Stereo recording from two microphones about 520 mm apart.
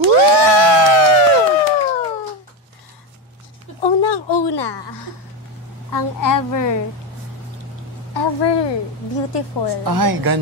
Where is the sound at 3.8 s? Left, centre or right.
Left.